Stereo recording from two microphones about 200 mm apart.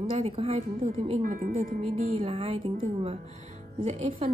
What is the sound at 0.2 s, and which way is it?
Speech, 35° right (ahead or behind).